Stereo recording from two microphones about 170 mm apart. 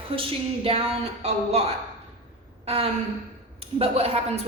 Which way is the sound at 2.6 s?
35° right (ahead or behind).